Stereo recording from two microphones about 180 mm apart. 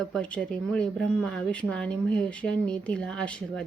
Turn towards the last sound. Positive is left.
turn(degrees=5)  # may be behind; listen again after turning